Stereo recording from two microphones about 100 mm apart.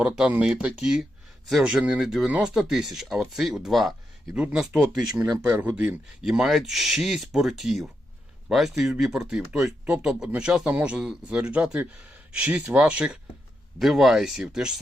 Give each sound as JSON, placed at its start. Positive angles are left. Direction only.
{"t": 0.0, "sound": "speech", "side_deg": -15}
{"t": 6.2, "sound": "speech", "side_deg": -5}